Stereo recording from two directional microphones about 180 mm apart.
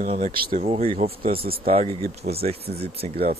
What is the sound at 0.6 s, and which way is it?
Speech, 35° right (ahead or behind).